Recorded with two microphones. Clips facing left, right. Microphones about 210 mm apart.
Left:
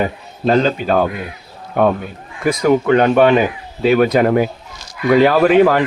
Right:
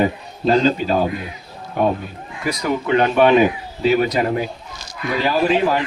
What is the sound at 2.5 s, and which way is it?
A man's voice, 50° left (ahead or behind).